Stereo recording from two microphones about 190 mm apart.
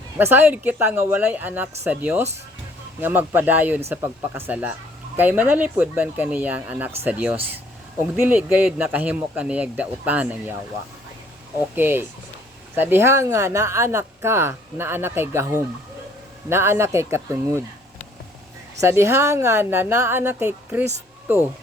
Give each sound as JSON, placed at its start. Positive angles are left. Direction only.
{"t": 0.2, "sound": "speech", "side_deg": -10}
{"t": 11.7, "sound": "speech", "side_deg": -10}
{"t": 16.5, "sound": "speech", "side_deg": -15}
{"t": 18.8, "sound": "speech", "side_deg": -15}